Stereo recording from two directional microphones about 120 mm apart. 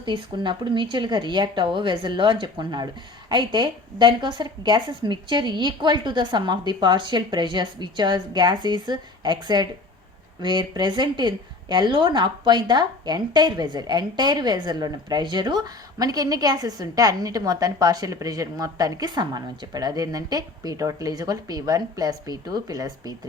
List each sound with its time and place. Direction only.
0.0 s a woman's voice: 40° right (ahead or behind)